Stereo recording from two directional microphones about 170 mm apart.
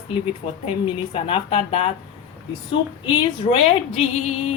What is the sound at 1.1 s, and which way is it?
Speech, 30° left (ahead or behind).